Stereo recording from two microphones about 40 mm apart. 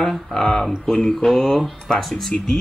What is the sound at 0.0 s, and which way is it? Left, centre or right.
Speech, centre.